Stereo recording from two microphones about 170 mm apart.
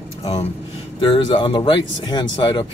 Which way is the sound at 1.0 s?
30° left (ahead or behind).